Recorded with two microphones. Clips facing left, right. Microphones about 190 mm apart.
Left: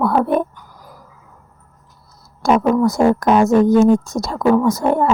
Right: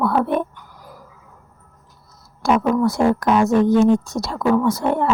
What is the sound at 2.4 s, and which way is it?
A woman's voice, 40° left (ahead or behind).